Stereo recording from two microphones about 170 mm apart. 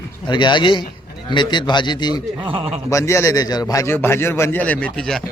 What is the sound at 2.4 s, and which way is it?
Speech, 30° right (ahead or behind).